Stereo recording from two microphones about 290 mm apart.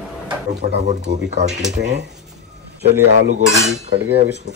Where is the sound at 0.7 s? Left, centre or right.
Right.